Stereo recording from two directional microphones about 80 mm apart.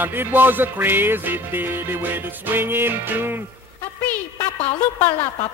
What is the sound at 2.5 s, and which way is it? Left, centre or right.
Music, right.